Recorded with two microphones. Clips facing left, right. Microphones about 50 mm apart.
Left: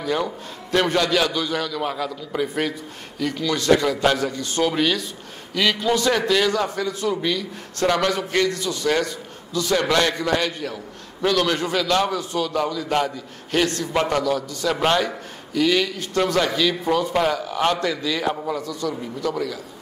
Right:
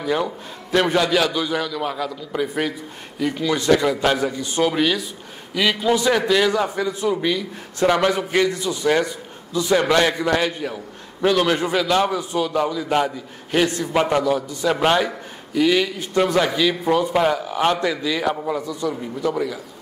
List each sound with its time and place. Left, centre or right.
0.0 s a man's voice: centre
3.2 s a man's voice: centre
18.6 s a man's voice: right